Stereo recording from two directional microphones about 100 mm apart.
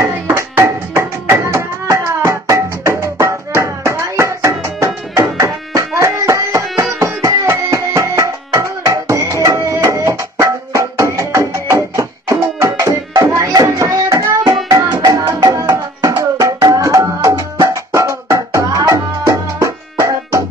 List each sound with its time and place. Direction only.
0.0 s music: 25° right (ahead or behind)